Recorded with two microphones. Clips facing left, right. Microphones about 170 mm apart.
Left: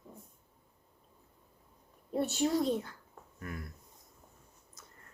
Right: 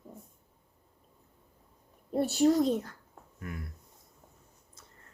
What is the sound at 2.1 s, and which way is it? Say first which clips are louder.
Speech: right 4 dB; 35° right (ahead or behind).